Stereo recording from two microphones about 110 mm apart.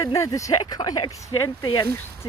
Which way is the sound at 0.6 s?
40° left (ahead or behind).